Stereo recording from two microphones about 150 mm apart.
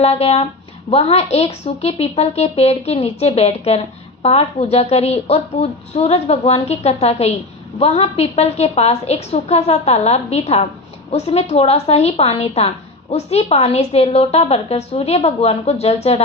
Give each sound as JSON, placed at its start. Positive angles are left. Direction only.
{"t": 0.0, "sound": "a woman's voice", "side_deg": 45}